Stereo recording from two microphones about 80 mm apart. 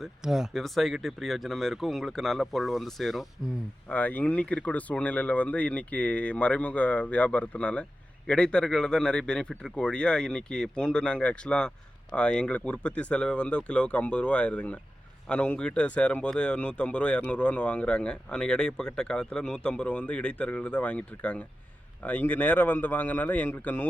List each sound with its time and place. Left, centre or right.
0.2 s speech: centre
3.8 s a man's voice: left